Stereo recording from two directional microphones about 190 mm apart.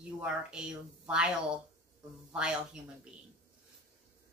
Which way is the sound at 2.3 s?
5° right (ahead or behind).